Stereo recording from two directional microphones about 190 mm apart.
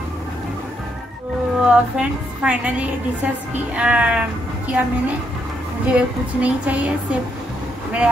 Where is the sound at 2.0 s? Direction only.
5° right (ahead or behind).